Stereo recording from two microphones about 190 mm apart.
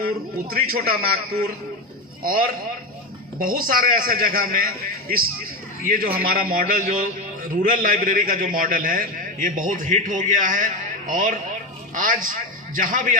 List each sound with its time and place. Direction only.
0.0 s a man's voice: 50° right (ahead or behind)
6.2 s a man's voice: 50° right (ahead or behind)